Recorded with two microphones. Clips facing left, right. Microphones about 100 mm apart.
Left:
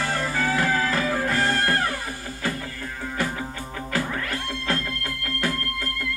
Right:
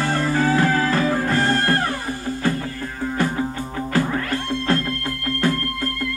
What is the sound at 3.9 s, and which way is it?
Music, 35° right (ahead or behind).